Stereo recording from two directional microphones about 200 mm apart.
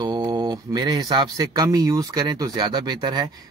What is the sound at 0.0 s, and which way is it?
Speech, 20° right (ahead or behind).